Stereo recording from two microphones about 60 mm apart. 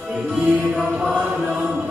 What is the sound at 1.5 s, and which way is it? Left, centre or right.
Music, centre.